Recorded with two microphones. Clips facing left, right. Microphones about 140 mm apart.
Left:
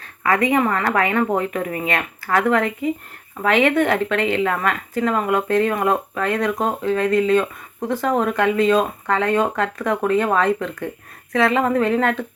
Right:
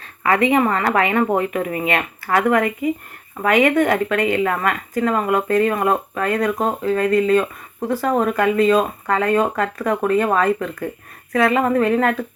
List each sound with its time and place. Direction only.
0.2 s a sound: 20° right (ahead or behind)
0.5 s speech: 20° right (ahead or behind)
2.3 s speech: 10° right (ahead or behind)